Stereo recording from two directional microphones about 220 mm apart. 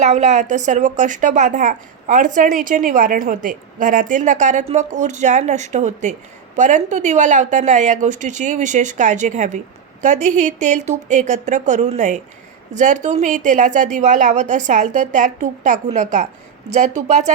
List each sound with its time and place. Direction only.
0.0 s a woman's voice: 35° right (ahead or behind)